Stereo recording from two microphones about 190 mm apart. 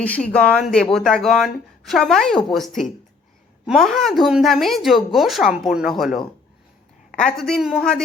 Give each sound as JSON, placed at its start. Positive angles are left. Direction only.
{"t": 0.0, "sound": "speech", "side_deg": 5}